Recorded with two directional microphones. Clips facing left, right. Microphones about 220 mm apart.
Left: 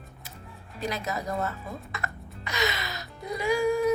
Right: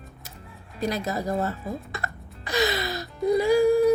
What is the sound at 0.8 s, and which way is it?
Child singing, 35° right (ahead or behind).